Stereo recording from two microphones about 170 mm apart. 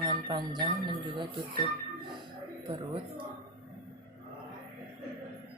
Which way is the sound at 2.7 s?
30° right (ahead or behind).